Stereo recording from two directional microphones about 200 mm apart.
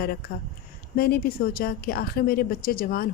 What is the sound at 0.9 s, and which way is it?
A woman's voice, 50° left (ahead or behind).